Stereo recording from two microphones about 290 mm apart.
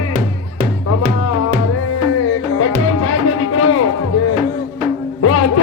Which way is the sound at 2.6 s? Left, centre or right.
Left.